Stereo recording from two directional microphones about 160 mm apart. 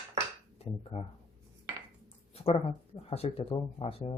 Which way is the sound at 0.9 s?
45° left (ahead or behind).